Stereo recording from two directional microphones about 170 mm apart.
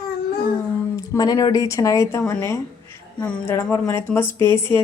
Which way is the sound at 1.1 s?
20° left (ahead or behind).